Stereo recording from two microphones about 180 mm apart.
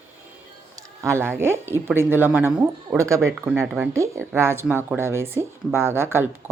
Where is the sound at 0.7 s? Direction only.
15° right (ahead or behind).